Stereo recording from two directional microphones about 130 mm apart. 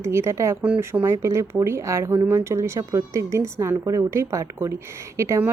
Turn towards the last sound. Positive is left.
turn(degrees=-20)  # may be behind; listen again after turning